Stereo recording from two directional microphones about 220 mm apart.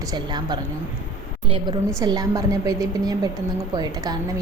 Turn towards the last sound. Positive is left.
turn(degrees=-20)  # may be behind; listen again after turning